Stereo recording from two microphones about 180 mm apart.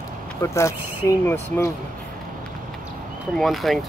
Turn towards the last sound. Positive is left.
turn(degrees=0)  # may be behind; listen again after turning